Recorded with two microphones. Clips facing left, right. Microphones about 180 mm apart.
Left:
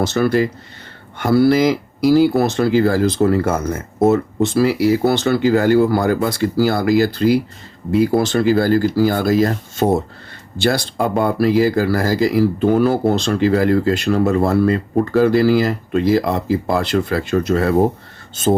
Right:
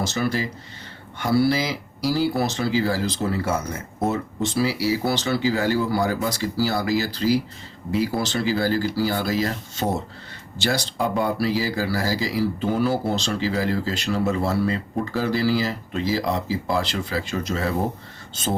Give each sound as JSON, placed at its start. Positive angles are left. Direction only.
{"t": 0.0, "sound": "speech", "side_deg": 60}